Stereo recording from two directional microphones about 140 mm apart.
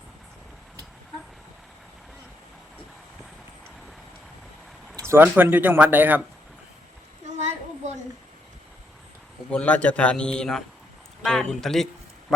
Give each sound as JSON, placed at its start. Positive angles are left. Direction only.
{"t": 5.0, "sound": "speech", "side_deg": -15}
{"t": 7.3, "sound": "a sound", "side_deg": -55}
{"t": 9.5, "sound": "a man's voice", "side_deg": 10}